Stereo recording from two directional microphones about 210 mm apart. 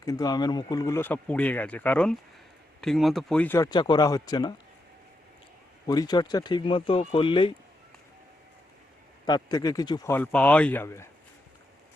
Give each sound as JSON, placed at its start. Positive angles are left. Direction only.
{"t": 0.0, "sound": "speech", "side_deg": 15}
{"t": 5.9, "sound": "speech", "side_deg": 20}
{"t": 9.2, "sound": "speech", "side_deg": 20}